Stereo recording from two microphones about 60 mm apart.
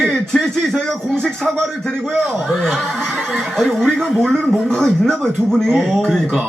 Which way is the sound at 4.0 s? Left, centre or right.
Centre.